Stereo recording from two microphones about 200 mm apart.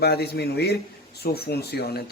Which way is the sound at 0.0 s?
50° left (ahead or behind).